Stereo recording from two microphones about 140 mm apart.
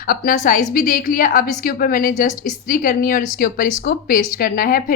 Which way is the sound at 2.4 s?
75° left (ahead or behind).